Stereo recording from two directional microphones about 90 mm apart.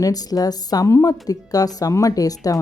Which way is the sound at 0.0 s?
45° left (ahead or behind).